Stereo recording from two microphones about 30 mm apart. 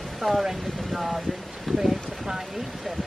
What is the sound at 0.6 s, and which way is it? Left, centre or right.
Speech, centre.